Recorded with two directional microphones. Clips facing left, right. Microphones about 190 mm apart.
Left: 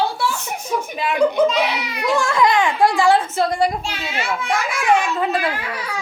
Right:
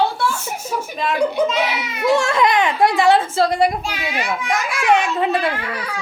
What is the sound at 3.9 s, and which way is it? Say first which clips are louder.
A child's voice: right 1 dB; 15° right (ahead or behind).